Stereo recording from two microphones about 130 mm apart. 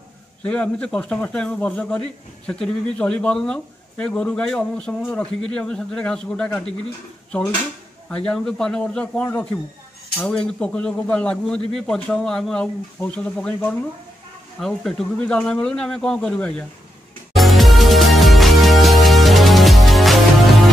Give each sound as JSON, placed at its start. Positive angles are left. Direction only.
{"t": 0.4, "sound": "a man's voice", "side_deg": 10}
{"t": 8.1, "sound": "a man's voice", "side_deg": 5}
{"t": 17.3, "sound": "music", "side_deg": 0}